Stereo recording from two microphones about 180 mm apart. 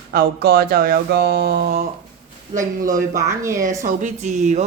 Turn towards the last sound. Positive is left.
turn(degrees=-40)  # may be behind; listen again after turning